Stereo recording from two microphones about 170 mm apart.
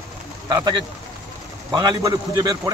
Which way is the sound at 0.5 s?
25° right (ahead or behind).